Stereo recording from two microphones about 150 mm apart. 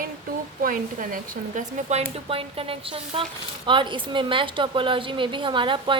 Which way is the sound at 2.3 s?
40° right (ahead or behind).